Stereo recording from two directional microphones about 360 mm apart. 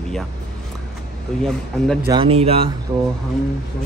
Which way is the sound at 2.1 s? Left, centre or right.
Centre.